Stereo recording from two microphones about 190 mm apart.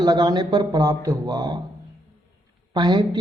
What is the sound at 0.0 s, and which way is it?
A man's voice, 20° right (ahead or behind).